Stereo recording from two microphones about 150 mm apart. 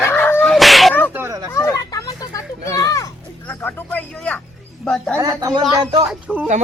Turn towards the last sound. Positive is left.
turn(degrees=-5)  # may be behind; listen again after turning